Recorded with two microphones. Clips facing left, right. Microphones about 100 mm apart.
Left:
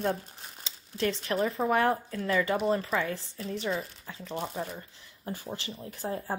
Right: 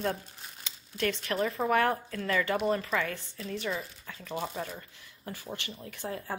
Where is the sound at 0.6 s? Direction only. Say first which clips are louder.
Left 1 dB; 25° left (ahead or behind).